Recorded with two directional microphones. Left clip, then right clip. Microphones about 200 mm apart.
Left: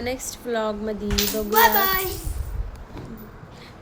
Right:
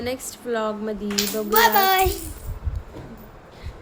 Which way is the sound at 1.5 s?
50° right (ahead or behind).